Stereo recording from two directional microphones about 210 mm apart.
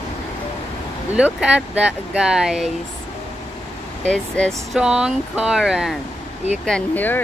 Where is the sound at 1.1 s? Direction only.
5° right (ahead or behind).